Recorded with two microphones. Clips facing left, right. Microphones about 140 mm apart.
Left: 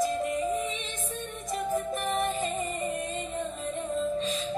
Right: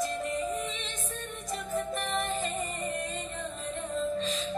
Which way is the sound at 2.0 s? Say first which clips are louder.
Left 3 dB; 25° left (ahead or behind).